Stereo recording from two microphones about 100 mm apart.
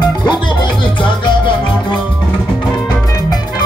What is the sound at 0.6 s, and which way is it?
Music, 50° left (ahead or behind).